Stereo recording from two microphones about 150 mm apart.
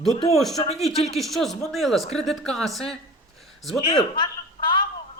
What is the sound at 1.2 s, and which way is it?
Speech, centre (ahead or behind).